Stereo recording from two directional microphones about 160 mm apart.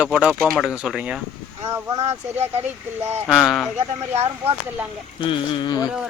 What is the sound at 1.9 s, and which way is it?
Speech, 45° right (ahead or behind).